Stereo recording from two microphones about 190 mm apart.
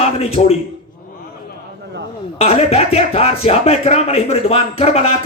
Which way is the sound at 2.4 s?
35° left (ahead or behind).